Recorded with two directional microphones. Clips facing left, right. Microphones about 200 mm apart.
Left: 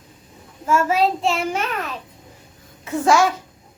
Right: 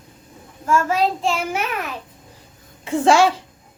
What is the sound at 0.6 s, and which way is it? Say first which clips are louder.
Child singing: left 1 dB; 5° left (ahead or behind).